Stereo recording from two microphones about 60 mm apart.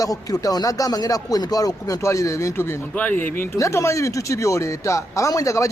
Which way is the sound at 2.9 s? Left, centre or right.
Left.